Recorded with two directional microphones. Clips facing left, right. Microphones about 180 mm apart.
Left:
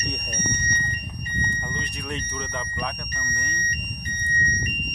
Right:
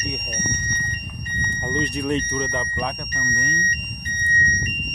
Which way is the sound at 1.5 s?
20° right (ahead or behind).